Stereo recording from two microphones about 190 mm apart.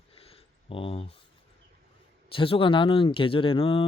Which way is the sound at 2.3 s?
30° left (ahead or behind).